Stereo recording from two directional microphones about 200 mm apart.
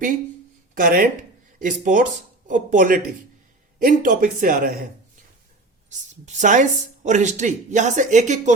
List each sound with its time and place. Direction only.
0.7 s speech: 45° right (ahead or behind)
5.9 s speech: 35° right (ahead or behind)